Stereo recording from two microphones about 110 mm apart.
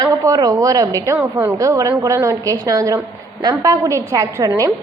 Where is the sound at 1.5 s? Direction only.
30° right (ahead or behind).